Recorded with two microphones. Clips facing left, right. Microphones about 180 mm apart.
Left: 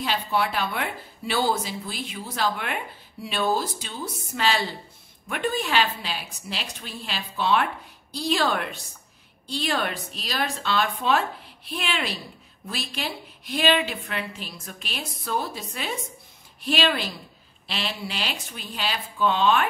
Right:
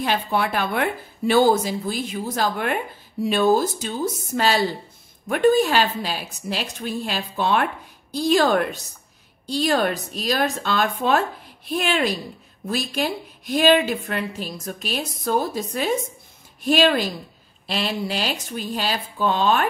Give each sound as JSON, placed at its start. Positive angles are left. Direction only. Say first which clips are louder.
{"t": 0.0, "sound": "a woman's voice", "louder": "right 3 dB", "side_deg": -50}